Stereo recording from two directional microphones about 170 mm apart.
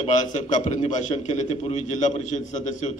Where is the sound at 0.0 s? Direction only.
45° left (ahead or behind).